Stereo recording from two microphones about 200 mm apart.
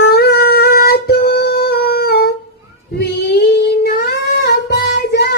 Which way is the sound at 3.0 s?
55° left (ahead or behind).